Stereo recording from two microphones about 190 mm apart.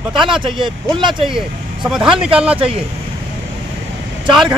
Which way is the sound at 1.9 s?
5° right (ahead or behind).